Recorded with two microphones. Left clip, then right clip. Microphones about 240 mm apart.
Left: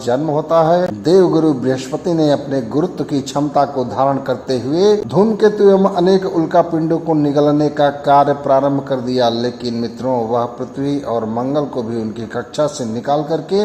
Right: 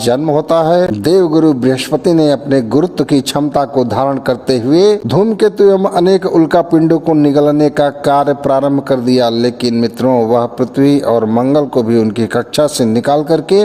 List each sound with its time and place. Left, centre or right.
0.0 s speech: right